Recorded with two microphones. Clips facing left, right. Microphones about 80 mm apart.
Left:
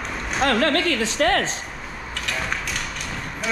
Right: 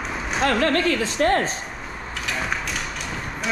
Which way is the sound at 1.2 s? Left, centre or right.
Left.